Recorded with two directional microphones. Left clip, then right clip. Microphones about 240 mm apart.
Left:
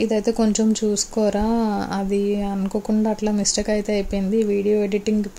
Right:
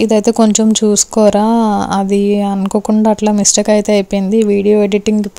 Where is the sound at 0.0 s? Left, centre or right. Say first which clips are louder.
Right 9 dB; right.